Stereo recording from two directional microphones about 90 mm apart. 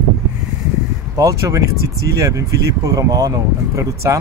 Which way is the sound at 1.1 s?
35° right (ahead or behind).